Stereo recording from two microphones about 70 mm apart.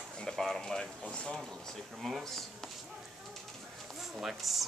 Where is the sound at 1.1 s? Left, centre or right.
Centre.